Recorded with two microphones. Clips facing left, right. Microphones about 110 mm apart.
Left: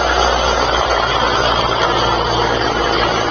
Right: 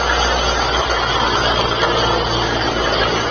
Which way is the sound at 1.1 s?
30° left (ahead or behind).